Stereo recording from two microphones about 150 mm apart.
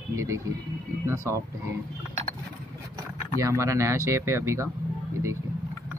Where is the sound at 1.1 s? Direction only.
20° right (ahead or behind).